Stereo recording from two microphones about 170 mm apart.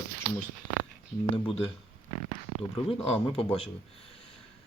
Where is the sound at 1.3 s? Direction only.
30° left (ahead or behind).